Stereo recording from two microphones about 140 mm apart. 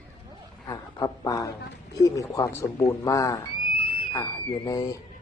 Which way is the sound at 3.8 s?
35° left (ahead or behind).